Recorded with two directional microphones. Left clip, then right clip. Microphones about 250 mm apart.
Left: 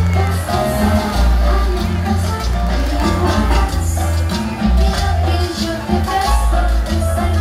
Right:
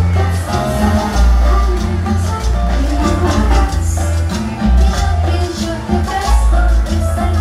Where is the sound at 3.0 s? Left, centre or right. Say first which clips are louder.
Right 1 dB; centre.